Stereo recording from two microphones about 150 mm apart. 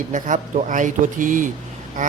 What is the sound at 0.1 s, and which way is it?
Speech, 55° right (ahead or behind).